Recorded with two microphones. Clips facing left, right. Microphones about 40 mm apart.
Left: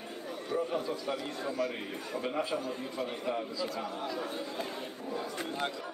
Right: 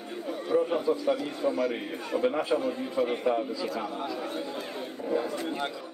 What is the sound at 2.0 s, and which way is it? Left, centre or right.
Speech, right.